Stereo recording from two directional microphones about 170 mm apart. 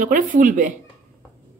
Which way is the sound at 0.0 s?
50° right (ahead or behind).